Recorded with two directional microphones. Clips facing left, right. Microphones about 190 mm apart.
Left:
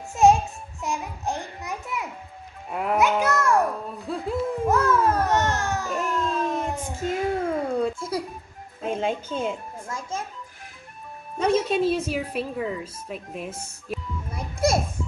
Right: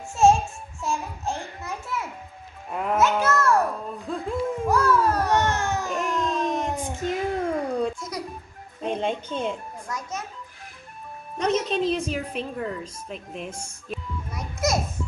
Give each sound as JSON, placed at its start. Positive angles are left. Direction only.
{"t": 0.1, "sound": "a sound", "side_deg": 15}
{"t": 2.7, "sound": "a child's voice", "side_deg": 5}
{"t": 3.0, "sound": "music", "side_deg": 15}
{"t": 4.6, "sound": "a sound", "side_deg": 20}
{"t": 5.3, "sound": "baby cry", "side_deg": -15}
{"t": 5.9, "sound": "a sound", "side_deg": 5}
{"t": 8.0, "sound": "music", "side_deg": 30}
{"t": 8.8, "sound": "speech", "side_deg": 5}
{"t": 9.8, "sound": "children playing", "side_deg": 25}
{"t": 11.3, "sound": "speech", "side_deg": 10}
{"t": 14.3, "sound": "children playing", "side_deg": 30}